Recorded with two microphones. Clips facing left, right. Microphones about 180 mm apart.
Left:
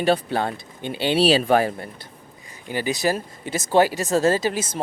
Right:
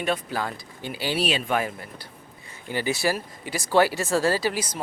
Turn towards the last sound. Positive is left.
turn(degrees=25)  # may be behind; listen again after turning